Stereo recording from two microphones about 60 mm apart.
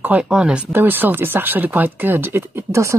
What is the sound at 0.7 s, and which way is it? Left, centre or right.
Speech, right.